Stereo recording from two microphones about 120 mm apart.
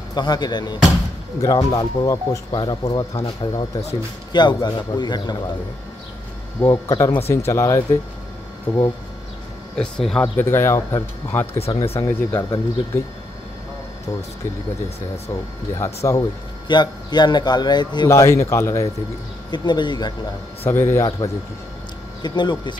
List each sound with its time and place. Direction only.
0.1 s a man's voice: 35° left (ahead or behind)
6.6 s speech: 25° left (ahead or behind)
9.8 s speech: 5° left (ahead or behind)
10.2 s speech: 20° left (ahead or behind)
11.7 s speech: 50° left (ahead or behind)
12.3 s speech: 20° left (ahead or behind)
15.8 s speech: 25° left (ahead or behind)
16.6 s a man's voice: 40° left (ahead or behind)
18.1 s speech: 25° left (ahead or behind)
19.5 s a man's voice: 40° left (ahead or behind)
20.6 s speech: 20° left (ahead or behind)
22.2 s a man's voice: 40° left (ahead or behind)